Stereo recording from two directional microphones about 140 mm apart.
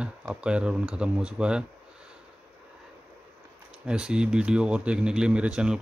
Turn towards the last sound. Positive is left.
turn(degrees=-5)  # may be behind; listen again after turning